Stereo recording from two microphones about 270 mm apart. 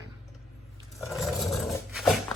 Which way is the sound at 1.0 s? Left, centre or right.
Centre.